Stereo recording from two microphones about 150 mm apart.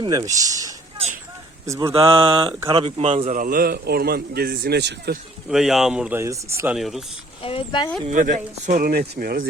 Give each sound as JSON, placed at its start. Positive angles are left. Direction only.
{"t": 0.0, "sound": "speech", "side_deg": -25}
{"t": 1.9, "sound": "speech", "side_deg": -40}
{"t": 3.3, "sound": "a man's voice", "side_deg": -70}
{"t": 5.5, "sound": "speech", "side_deg": -5}
{"t": 6.1, "sound": "speech", "side_deg": -20}
{"t": 6.7, "sound": "speech", "side_deg": 0}
{"t": 7.4, "sound": "speech", "side_deg": 35}
{"t": 8.1, "sound": "speech", "side_deg": -60}